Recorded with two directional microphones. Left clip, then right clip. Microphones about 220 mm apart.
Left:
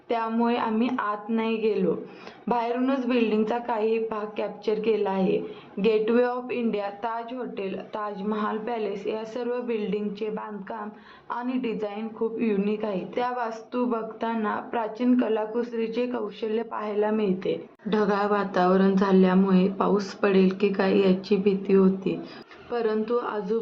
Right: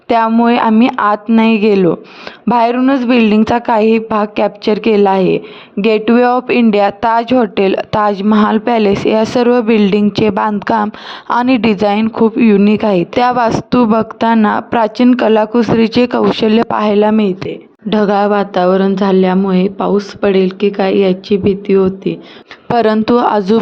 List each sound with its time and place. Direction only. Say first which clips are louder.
0.1 s a woman's voice: right 15 dB; 50° right (ahead or behind); by 22.2 s 35° right (ahead or behind)
22.7 s a woman's voice: right 15 dB; 50° right (ahead or behind)